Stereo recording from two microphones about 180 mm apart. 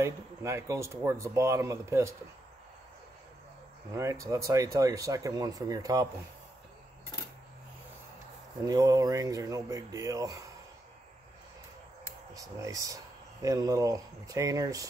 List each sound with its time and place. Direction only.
0.0 s speech: 15° right (ahead or behind)
3.9 s speech: 15° right (ahead or behind)
8.6 s speech: 20° right (ahead or behind)
12.4 s speech: 20° right (ahead or behind)